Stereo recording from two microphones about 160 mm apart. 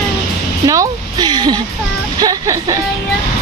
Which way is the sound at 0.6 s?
20° right (ahead or behind).